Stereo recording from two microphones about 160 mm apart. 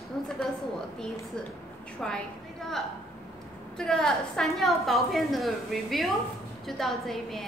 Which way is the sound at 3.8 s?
5° left (ahead or behind).